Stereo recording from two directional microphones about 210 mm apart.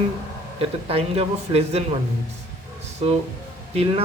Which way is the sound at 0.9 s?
30° right (ahead or behind).